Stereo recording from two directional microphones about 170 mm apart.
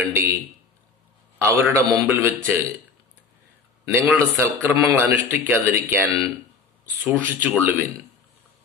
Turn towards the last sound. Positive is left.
turn(degrees=-10)  # may be behind; listen again after turning